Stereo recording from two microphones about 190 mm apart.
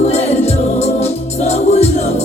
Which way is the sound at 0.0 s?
35° left (ahead or behind).